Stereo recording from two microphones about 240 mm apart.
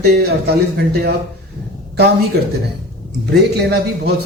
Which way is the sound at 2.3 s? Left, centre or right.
Right.